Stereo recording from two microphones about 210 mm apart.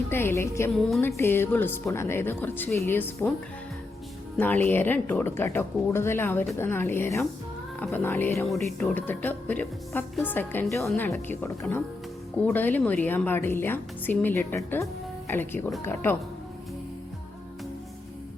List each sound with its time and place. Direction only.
0.1 s speech: 10° left (ahead or behind)
4.4 s speech: 10° left (ahead or behind)